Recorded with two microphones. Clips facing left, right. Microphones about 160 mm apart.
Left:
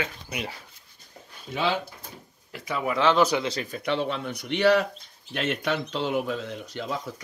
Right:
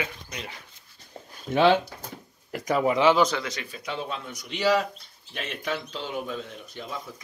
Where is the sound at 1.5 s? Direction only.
55° right (ahead or behind); by 2.9 s 40° right (ahead or behind).